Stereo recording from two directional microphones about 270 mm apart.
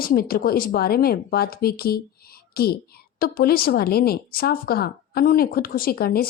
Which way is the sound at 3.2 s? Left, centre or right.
Left.